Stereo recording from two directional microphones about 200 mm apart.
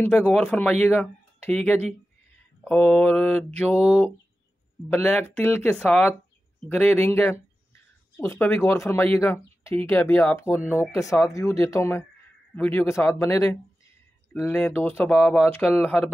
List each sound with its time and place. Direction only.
0.0 s speech: 5° left (ahead or behind)